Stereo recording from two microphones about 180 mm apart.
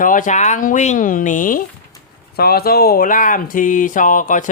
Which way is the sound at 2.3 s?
60° left (ahead or behind).